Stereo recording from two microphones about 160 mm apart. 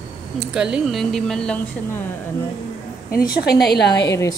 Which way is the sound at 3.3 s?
85° left.